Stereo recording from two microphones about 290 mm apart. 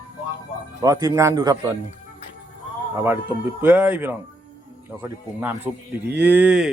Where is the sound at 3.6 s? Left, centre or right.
Centre.